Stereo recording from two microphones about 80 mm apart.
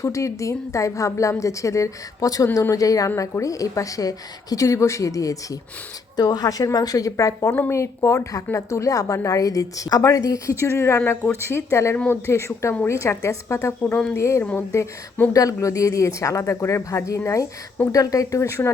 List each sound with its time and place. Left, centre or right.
0.0 s a woman's voice: left
6.1 s a woman's voice: left
10.6 s a woman's voice: left